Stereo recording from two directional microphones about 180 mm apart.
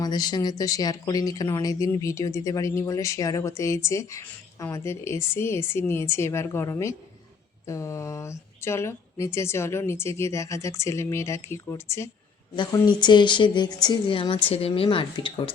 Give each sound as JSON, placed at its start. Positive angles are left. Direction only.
{"t": 0.0, "sound": "a woman's voice", "side_deg": 20}